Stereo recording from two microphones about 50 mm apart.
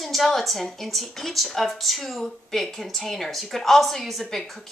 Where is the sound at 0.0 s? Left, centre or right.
Centre.